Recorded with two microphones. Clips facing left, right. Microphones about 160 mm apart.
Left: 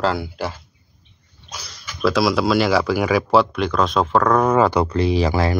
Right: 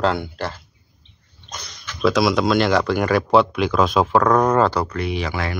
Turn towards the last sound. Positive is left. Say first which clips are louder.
# left 6 dB
turn(degrees=35)  # may be behind; listen again after turning